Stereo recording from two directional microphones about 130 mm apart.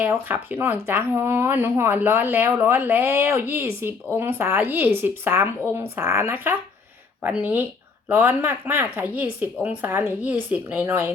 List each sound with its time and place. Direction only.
0.0 s speech: 15° right (ahead or behind)